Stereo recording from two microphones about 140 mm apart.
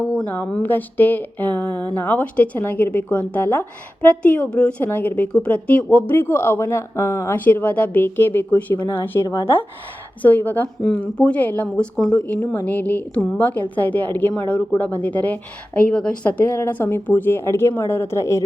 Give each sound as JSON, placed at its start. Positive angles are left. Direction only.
{"t": 0.0, "sound": "speech", "side_deg": 10}
{"t": 9.2, "sound": "speech", "side_deg": 25}
{"t": 10.2, "sound": "speech", "side_deg": 15}